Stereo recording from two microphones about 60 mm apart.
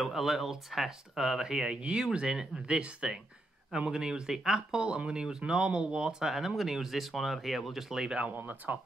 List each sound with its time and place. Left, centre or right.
0.0 s speech: centre
8.3 s speech: right